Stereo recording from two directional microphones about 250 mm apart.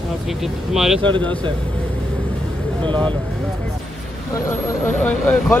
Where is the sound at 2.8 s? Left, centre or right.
Centre.